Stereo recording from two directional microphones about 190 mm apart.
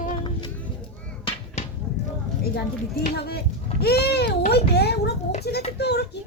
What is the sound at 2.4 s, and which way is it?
A child's voice, 55° left (ahead or behind).